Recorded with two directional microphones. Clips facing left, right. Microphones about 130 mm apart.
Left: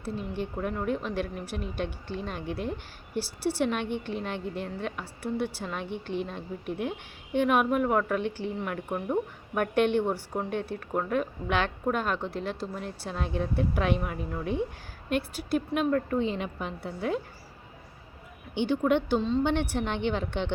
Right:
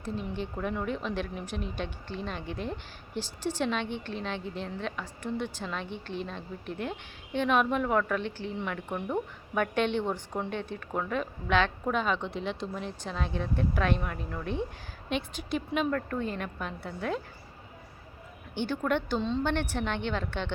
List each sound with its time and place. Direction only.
0.0 s a woman's voice: 10° left (ahead or behind)
16.1 s a woman's voice: 20° left (ahead or behind)
18.5 s a woman's voice: 15° left (ahead or behind)